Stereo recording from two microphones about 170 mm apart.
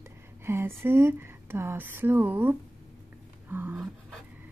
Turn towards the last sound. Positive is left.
turn(degrees=-10)  # may be behind; listen again after turning